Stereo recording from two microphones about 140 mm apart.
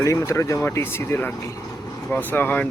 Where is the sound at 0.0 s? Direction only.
20° left (ahead or behind).